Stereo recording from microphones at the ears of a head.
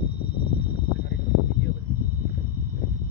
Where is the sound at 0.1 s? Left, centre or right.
Left.